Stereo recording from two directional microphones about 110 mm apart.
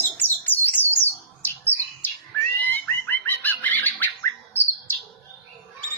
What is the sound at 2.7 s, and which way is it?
Music, 15° left (ahead or behind).